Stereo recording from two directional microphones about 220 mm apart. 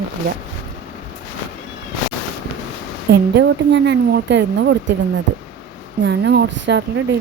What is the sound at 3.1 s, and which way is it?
Speech, 50° right (ahead or behind).